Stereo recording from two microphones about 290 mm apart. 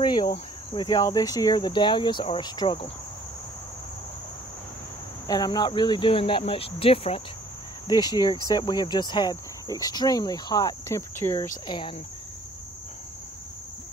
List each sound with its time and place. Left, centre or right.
0.0 s cricket: centre
0.7 s speech: centre
5.2 s speech: centre